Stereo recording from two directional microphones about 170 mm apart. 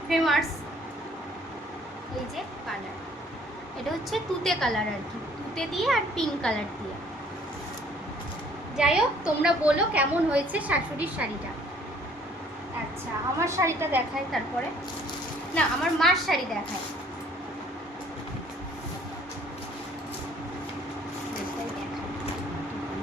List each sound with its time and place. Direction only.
0.1 s a sound: centre (ahead or behind)
4.1 s a woman's voice: centre (ahead or behind)
8.8 s a woman's voice: 5° right (ahead or behind)
13.4 s a woman's voice: 15° right (ahead or behind)
14.3 s a woman's voice: centre (ahead or behind)
15.5 s a woman's voice: centre (ahead or behind)